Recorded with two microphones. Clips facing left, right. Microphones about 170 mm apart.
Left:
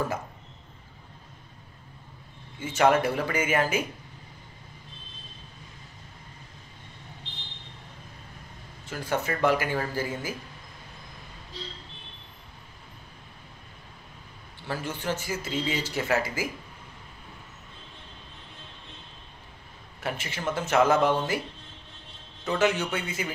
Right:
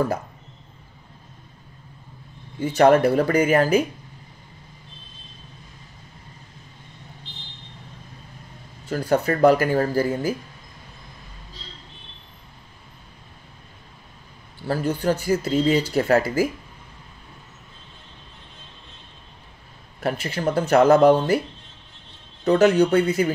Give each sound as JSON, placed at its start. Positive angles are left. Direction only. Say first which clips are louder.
{"t": 2.6, "sound": "speech", "louder": "right 7 dB", "side_deg": -35}
{"t": 8.8, "sound": "speech", "louder": "right 8 dB", "side_deg": -35}
{"t": 14.7, "sound": "speech", "louder": "right 9 dB", "side_deg": -40}
{"t": 20.0, "sound": "speech", "louder": "right 8 dB", "side_deg": -40}
{"t": 22.4, "sound": "speech", "louder": "right 9 dB", "side_deg": -40}